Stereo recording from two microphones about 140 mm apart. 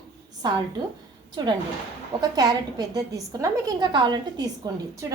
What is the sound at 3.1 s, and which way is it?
A woman's voice, 25° right (ahead or behind).